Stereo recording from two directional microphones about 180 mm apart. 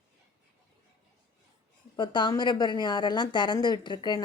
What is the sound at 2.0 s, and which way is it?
Speech, 25° left (ahead or behind).